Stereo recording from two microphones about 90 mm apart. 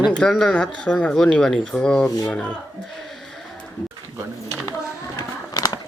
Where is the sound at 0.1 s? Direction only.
5° left (ahead or behind).